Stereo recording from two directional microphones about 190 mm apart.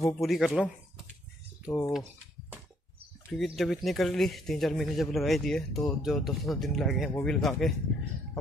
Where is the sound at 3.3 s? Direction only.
Centre (ahead or behind).